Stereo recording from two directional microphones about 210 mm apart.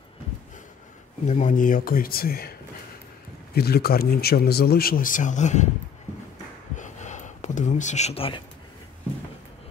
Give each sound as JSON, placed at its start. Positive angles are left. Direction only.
{"t": 1.2, "sound": "speech", "side_deg": 35}
{"t": 3.5, "sound": "speech", "side_deg": 50}
{"t": 6.8, "sound": "a sound", "side_deg": 35}